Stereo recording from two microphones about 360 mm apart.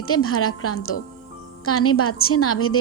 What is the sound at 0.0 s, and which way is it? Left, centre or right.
A woman's voice, left.